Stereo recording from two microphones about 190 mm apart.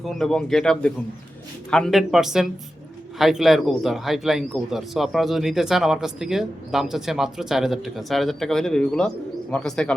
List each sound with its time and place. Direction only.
0.0 s a man's voice: centre (ahead or behind)